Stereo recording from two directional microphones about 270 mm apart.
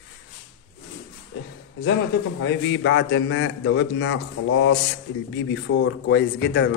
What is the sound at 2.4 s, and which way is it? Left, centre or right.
A man's voice, left.